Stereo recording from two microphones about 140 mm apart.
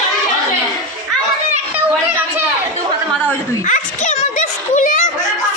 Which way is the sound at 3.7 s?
65° left (ahead or behind).